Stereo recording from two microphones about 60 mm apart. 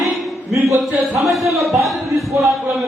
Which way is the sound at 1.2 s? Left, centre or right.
Centre.